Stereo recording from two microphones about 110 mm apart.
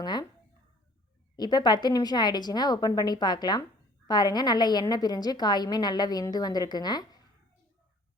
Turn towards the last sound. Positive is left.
turn(degrees=40)  # may be behind; listen again after turning